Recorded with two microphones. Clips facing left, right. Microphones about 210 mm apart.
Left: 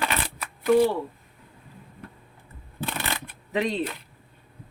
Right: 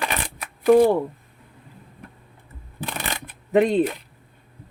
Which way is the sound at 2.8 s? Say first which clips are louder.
Even; 15° right (ahead or behind).